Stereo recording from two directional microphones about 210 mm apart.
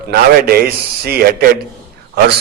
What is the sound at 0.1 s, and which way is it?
A man's voice, 45° right (ahead or behind).